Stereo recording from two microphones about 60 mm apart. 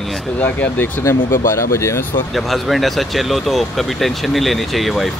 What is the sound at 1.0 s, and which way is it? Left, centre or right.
Speech, left.